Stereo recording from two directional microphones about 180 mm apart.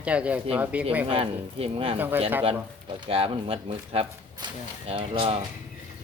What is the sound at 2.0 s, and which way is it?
Speech, 10° right (ahead or behind).